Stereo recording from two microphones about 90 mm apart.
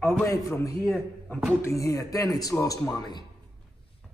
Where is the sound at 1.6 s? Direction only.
35° left (ahead or behind).